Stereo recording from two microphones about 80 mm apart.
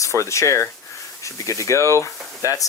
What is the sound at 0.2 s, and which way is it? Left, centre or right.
Speech, left.